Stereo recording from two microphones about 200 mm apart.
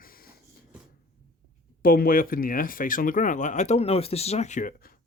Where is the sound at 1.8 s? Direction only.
45° left (ahead or behind).